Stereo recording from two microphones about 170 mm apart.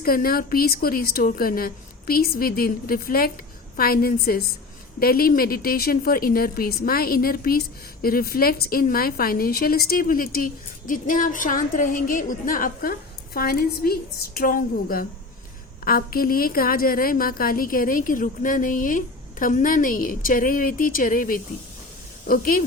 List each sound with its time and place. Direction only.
0.0 s a woman's voice: 60° left (ahead or behind)